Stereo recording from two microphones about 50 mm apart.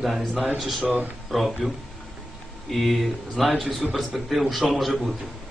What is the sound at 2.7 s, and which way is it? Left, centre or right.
A man's voice, centre.